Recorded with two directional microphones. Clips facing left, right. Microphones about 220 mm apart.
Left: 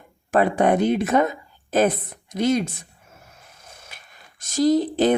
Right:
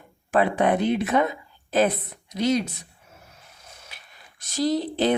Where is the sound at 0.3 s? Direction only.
45° left (ahead or behind).